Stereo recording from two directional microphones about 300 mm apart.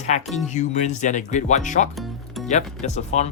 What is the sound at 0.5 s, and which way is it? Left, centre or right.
Speech, left.